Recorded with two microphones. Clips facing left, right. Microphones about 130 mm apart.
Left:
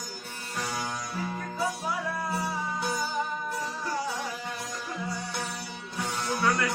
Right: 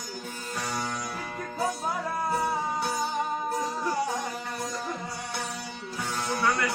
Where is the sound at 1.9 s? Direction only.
50° right (ahead or behind).